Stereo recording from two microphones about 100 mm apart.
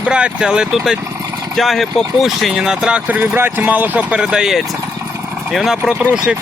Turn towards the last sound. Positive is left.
turn(degrees=-5)  # may be behind; listen again after turning